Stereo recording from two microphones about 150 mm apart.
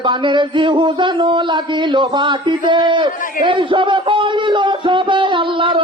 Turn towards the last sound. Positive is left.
turn(degrees=-35)  # may be behind; listen again after turning